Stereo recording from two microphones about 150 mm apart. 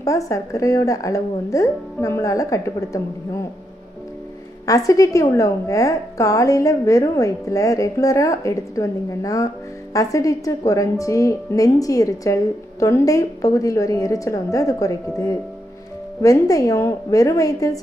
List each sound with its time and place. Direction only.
0.0 s a woman's voice: 20° left (ahead or behind)
4.6 s a woman's voice: 20° left (ahead or behind)